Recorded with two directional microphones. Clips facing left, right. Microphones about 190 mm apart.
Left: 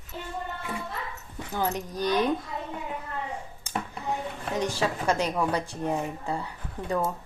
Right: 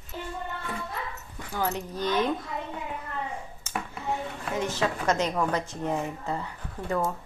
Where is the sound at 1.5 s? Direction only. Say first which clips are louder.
Left 1 dB; 15° left (ahead or behind).